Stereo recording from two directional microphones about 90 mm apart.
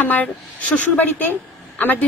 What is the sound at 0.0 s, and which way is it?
A woman's voice, 15° left (ahead or behind).